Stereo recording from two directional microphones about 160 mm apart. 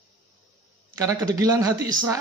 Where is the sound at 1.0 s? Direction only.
20° right (ahead or behind).